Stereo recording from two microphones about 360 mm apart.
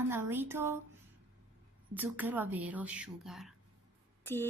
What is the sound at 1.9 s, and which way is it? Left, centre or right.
A woman's voice, centre.